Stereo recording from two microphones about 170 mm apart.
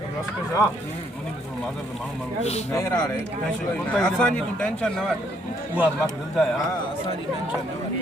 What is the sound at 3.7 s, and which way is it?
Speech, 5° left (ahead or behind).